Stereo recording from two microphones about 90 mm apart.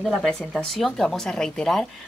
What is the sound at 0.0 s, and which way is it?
Speech, centre (ahead or behind).